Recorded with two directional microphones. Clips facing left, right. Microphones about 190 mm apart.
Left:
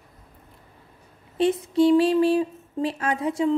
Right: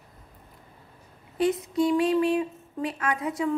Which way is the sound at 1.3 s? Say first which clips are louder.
Left 4 dB; 30° left (ahead or behind).